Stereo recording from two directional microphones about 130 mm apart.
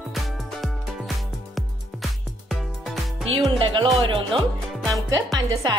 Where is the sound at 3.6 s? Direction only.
35° right (ahead or behind).